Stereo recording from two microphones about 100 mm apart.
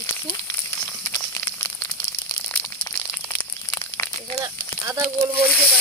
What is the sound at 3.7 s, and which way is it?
Crumpling, 25° left (ahead or behind).